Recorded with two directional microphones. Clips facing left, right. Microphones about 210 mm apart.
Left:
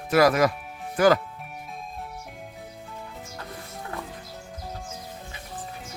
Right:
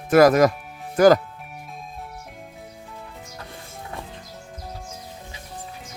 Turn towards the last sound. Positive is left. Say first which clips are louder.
# even
turn(degrees=55)  # may be behind; listen again after turning